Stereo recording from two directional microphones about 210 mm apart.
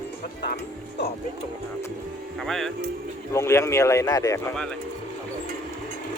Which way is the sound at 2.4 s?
Centre (ahead or behind).